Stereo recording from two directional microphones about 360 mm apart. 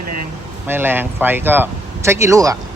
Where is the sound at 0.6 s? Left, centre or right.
Centre.